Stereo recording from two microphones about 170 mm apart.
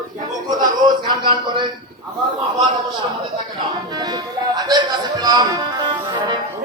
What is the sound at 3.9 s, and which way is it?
Music, 25° right (ahead or behind).